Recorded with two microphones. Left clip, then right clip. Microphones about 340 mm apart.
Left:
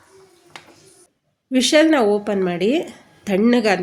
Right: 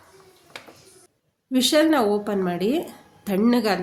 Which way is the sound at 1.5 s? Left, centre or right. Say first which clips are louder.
Left 4 dB; right.